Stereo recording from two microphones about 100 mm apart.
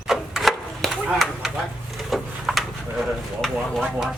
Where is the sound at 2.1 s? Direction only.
Centre (ahead or behind).